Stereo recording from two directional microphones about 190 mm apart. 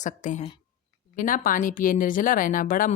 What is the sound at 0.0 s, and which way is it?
A woman's voice, 40° left (ahead or behind).